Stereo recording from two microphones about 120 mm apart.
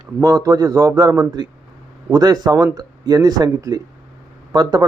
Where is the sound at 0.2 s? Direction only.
30° right (ahead or behind).